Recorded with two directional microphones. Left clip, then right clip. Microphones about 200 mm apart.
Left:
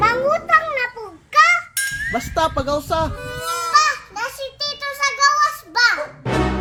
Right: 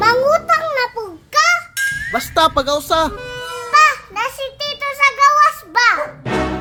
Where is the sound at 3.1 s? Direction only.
Centre (ahead or behind).